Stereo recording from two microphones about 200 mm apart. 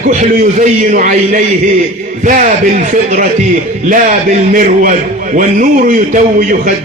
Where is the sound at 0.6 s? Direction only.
40° right (ahead or behind).